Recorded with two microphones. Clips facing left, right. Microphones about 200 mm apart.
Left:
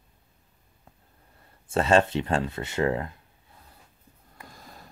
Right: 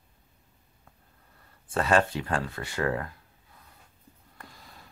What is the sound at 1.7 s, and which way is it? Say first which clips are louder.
Speech: left 3 dB; 25° left (ahead or behind).